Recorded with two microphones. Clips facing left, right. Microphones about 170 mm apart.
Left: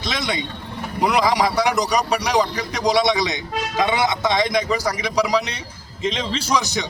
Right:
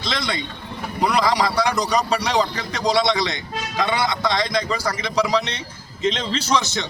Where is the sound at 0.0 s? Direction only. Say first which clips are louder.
Left 1 dB; 20° left (ahead or behind).